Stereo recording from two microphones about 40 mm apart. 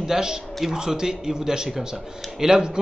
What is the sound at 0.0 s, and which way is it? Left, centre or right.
A man's voice, centre.